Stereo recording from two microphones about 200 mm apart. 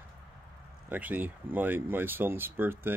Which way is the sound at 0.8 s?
10° right (ahead or behind).